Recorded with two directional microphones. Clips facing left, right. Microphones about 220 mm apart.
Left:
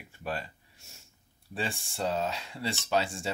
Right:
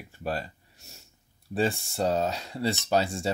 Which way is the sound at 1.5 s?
40° right (ahead or behind).